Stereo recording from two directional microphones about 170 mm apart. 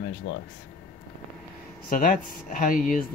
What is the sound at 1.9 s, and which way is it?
Speech, 55° left (ahead or behind).